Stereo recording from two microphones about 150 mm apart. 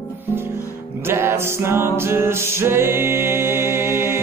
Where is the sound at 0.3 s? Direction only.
15° right (ahead or behind).